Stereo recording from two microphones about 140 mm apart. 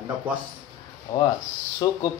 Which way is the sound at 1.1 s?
25° left (ahead or behind).